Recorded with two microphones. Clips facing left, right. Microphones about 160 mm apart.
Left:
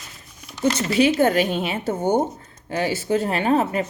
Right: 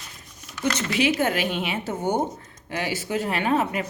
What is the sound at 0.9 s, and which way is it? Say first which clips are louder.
Speech: left 5 dB; 35° left (ahead or behind).